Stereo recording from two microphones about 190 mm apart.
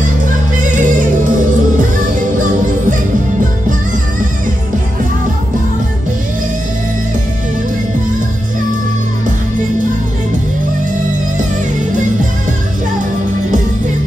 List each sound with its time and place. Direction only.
0.6 s music: 45° right (ahead or behind)